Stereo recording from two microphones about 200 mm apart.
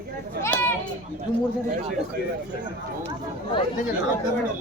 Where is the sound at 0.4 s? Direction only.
10° left (ahead or behind).